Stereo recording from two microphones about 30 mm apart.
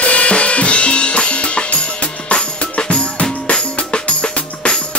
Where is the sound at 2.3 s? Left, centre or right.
Left.